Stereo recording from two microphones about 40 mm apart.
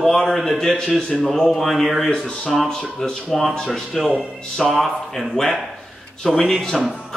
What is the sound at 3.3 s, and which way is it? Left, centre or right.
Speech, centre.